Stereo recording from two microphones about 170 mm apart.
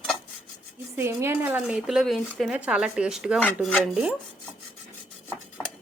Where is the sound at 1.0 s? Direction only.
15° right (ahead or behind).